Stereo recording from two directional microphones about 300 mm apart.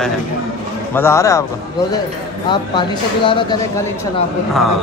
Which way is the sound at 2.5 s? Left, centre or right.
Centre.